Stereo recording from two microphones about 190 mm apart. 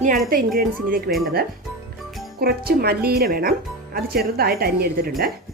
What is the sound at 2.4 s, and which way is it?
Speech, 55° right (ahead or behind).